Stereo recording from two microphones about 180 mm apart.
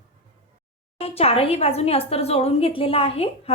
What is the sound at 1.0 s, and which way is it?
A woman's voice, 35° left (ahead or behind).